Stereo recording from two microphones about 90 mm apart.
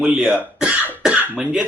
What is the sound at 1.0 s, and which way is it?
Cough, 10° right (ahead or behind).